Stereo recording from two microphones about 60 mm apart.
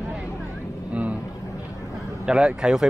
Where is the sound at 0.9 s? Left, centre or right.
Right.